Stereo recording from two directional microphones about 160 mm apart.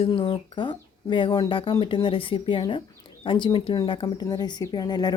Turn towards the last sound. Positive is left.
turn(degrees=25)  # may be behind; listen again after turning